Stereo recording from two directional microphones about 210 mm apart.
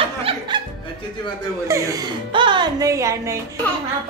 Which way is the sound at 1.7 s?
15° right (ahead or behind).